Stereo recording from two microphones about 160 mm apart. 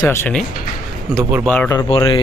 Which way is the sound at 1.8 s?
35° left (ahead or behind).